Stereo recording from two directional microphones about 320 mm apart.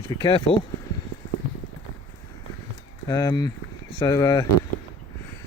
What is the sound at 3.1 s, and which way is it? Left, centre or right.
Speech, centre.